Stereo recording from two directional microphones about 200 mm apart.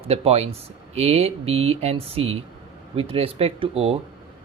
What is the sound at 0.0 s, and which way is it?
Speech, 30° right (ahead or behind).